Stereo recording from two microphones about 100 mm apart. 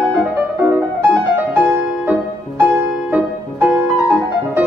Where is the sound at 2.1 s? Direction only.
15° right (ahead or behind).